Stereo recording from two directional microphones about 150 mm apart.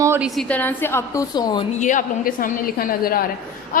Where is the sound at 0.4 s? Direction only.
10° left (ahead or behind); by 1.6 s 25° left (ahead or behind).